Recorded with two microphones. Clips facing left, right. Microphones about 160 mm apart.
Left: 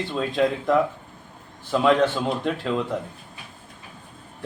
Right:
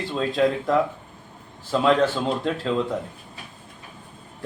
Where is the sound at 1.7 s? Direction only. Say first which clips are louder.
Even; 10° left (ahead or behind).